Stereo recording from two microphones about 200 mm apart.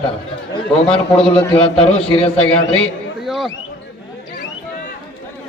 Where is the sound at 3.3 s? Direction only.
Centre (ahead or behind).